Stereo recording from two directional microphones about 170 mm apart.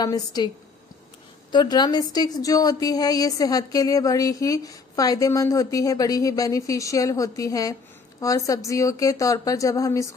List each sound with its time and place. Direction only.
0.0 s a woman's voice: 25° left (ahead or behind)
1.5 s a woman's voice: 25° left (ahead or behind)